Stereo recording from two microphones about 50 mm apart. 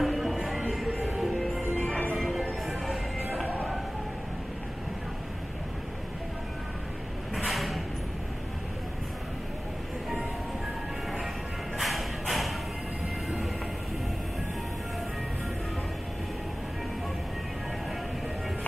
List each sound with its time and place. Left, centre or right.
0.0 s music: centre
1.8 s music: centre
2.1 s music: centre
7.3 s a sound: centre
11.8 s music: centre